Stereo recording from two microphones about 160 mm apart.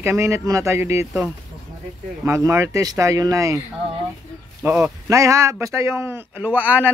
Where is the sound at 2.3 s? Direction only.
15° right (ahead or behind).